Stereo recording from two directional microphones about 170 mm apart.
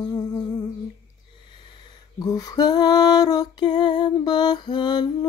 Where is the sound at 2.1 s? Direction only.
20° left (ahead or behind).